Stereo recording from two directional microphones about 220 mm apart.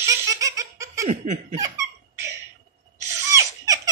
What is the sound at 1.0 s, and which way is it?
Laughter, 30° right (ahead or behind).